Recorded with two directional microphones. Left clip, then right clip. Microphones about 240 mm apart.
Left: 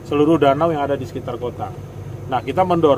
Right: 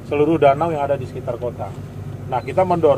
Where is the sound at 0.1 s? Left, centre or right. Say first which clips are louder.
Even; left.